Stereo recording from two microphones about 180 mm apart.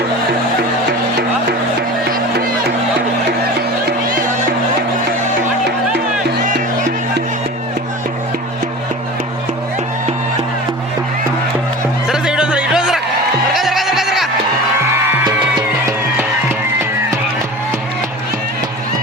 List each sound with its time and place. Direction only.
2.1 s music: 55° right (ahead or behind)
12.0 s music: 5° right (ahead or behind)
13.5 s goat: centre (ahead or behind)